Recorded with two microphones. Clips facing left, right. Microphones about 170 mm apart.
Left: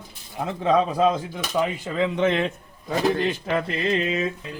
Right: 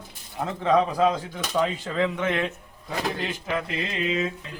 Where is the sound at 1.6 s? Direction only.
15° left (ahead or behind).